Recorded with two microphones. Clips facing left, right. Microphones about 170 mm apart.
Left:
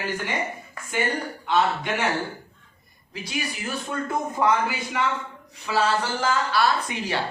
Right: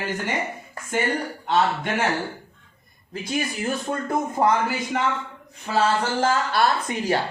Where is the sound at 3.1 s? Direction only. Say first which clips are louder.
Right 4 dB; 50° right (ahead or behind).